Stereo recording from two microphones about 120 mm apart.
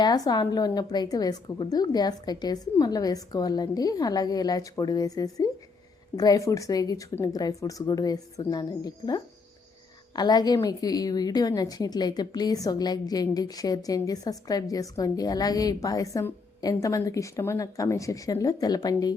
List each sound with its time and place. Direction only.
0.0 s a woman's voice: 35° left (ahead or behind)